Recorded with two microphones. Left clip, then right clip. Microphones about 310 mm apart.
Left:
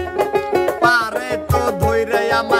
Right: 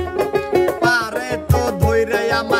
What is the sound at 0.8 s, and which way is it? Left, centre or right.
Music, centre.